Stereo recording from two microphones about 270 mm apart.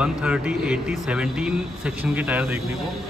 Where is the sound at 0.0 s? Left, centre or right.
Centre.